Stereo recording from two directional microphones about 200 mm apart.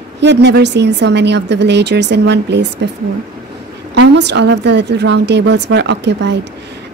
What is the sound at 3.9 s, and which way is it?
A woman's voice, 60° right (ahead or behind).